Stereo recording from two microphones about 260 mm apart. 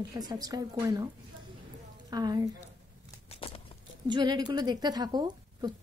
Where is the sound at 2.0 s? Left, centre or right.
Centre.